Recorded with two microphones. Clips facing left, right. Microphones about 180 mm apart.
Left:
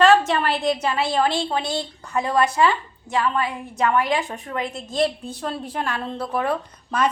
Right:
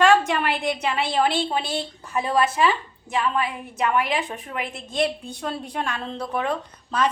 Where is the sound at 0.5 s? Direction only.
Centre (ahead or behind).